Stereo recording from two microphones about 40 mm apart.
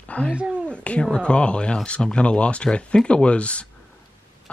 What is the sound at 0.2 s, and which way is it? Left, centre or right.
Speech, left.